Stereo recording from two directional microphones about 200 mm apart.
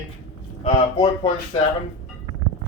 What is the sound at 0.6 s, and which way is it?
Speech, 25° left (ahead or behind).